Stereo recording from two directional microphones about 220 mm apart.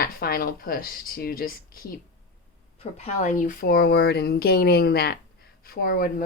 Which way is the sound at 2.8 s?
30° left (ahead or behind).